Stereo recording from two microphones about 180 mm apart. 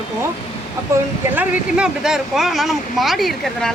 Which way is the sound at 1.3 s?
5° right (ahead or behind).